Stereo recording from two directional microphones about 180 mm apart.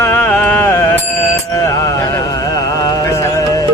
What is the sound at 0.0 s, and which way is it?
Music, 10° left (ahead or behind).